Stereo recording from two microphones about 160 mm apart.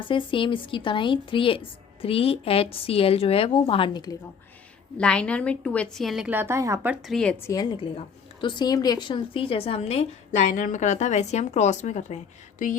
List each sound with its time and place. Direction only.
0.0 s a woman's voice: 30° left (ahead or behind)
4.9 s a woman's voice: 5° left (ahead or behind); by 7.0 s 15° right (ahead or behind)
7.1 s a woman's voice: 5° left (ahead or behind)
7.4 s a woman's voice: 25° left (ahead or behind); by 12.7 s 50° left (ahead or behind)